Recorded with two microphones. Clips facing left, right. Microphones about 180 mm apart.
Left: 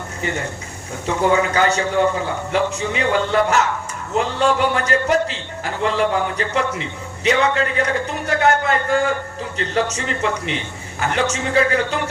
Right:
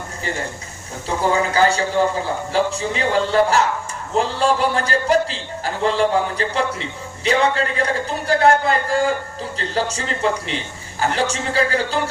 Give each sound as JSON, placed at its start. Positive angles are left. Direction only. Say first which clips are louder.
{"t": 1.0, "sound": "a man's voice", "louder": "left 2 dB", "side_deg": -35}